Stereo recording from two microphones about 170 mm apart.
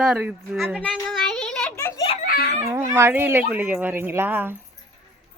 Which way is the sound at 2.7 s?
15° right (ahead or behind).